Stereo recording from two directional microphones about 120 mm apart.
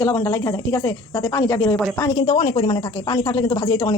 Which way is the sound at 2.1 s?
50° left (ahead or behind).